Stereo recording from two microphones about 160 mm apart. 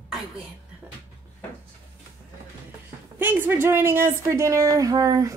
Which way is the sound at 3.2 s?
10° right (ahead or behind).